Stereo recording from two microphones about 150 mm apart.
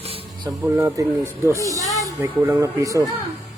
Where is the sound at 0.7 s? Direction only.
20° right (ahead or behind).